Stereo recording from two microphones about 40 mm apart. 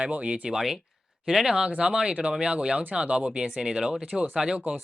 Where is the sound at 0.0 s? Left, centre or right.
Right.